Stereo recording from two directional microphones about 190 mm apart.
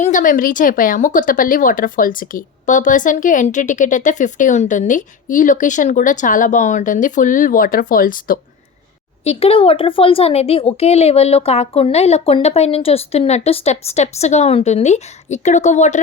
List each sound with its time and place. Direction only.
0.0 s a woman's voice: 45° left (ahead or behind)
9.2 s speech: 30° left (ahead or behind)